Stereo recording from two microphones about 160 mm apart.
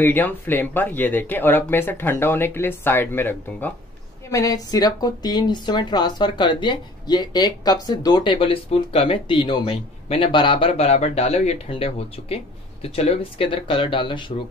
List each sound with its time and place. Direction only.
0.0 s a woman's voice: 10° left (ahead or behind); by 14.3 s 30° left (ahead or behind)